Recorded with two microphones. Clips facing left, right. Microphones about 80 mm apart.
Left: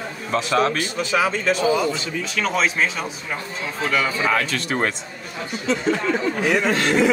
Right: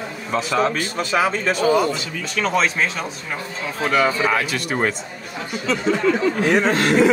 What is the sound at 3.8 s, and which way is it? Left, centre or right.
Speech, right.